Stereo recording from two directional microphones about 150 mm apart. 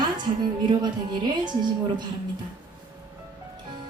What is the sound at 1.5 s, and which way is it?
Speech, 30° right (ahead or behind).